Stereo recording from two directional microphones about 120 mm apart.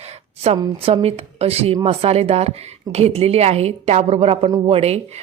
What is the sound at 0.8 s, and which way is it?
A woman's voice, 55° right (ahead or behind).